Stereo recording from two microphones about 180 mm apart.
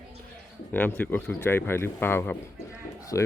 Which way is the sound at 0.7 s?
10° left (ahead or behind).